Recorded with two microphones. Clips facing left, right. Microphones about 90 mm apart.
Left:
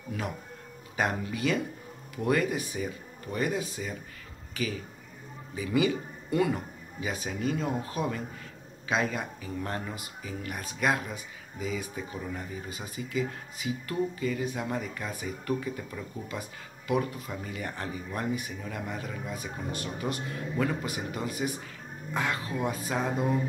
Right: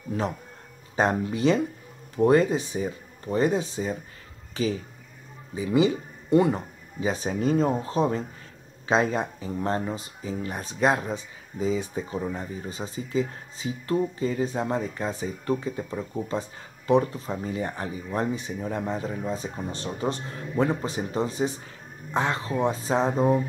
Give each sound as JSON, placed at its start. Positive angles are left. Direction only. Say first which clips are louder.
{"t": 0.1, "sound": "speech", "louder": "right 7 dB", "side_deg": -30}